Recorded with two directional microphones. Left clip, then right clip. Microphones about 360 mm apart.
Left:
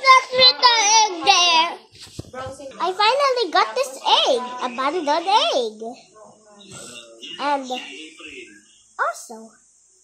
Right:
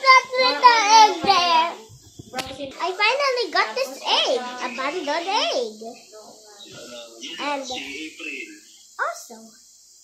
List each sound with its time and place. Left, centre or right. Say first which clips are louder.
0.0 s child singing: left 2 dB; centre
2.8 s a sound: left 3 dB; centre
7.3 s a child's voice: left 5 dB; centre